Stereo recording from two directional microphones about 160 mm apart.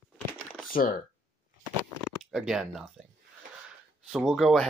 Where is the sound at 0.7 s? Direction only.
60° left (ahead or behind).